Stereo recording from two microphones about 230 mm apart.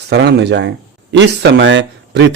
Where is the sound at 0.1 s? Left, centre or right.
Right.